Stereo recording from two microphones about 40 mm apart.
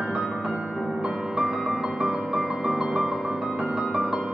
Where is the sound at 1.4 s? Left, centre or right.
Right.